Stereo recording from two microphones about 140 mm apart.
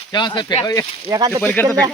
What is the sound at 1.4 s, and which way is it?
Speech, 10° left (ahead or behind).